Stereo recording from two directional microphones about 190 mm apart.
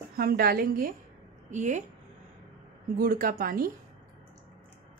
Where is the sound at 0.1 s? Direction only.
50° right (ahead or behind).